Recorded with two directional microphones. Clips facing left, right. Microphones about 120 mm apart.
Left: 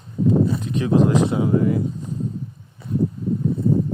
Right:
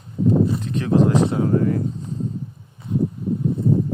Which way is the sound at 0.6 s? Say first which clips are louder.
Even; 15° left (ahead or behind).